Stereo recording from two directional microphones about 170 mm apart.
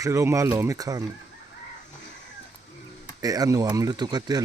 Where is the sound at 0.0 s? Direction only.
15° right (ahead or behind).